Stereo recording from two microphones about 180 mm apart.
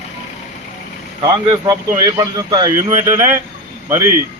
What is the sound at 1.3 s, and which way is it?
Speech, 30° right (ahead or behind).